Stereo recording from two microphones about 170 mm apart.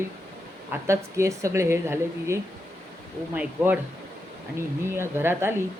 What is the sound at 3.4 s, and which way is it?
Speech, 10° right (ahead or behind).